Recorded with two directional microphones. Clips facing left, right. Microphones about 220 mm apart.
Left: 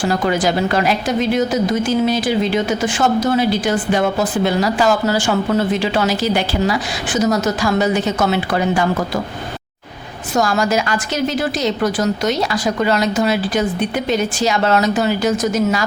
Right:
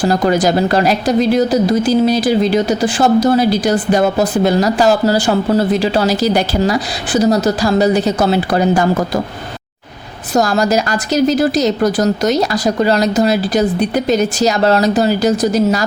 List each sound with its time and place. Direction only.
0.0 s speech: 40° right (ahead or behind)
10.3 s speech: 35° right (ahead or behind)